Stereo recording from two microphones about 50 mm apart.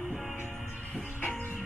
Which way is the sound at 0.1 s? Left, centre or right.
Centre.